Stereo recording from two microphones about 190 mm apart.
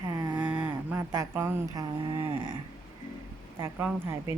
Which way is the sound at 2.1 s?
25° right (ahead or behind).